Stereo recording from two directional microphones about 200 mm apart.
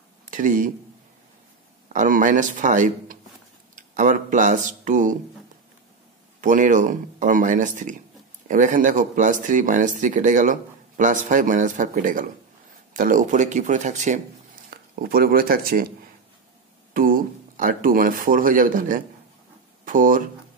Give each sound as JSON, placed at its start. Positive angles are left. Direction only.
{"t": 0.2, "sound": "a sound", "side_deg": -40}
{"t": 1.9, "sound": "speech", "side_deg": -40}
{"t": 6.4, "sound": "speech", "side_deg": -40}
{"t": 14.7, "sound": "speech", "side_deg": -50}
{"t": 16.9, "sound": "speech", "side_deg": -45}